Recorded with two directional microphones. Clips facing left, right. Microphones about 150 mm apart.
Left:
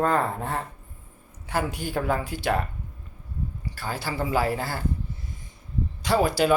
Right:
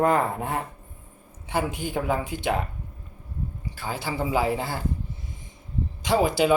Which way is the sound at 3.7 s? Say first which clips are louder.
Right 1 dB; 20° right (ahead or behind).